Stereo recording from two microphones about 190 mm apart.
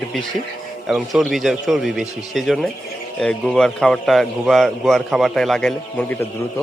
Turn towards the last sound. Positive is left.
turn(degrees=10)  # may be behind; listen again after turning